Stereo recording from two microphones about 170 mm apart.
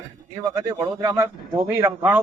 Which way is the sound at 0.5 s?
15° right (ahead or behind).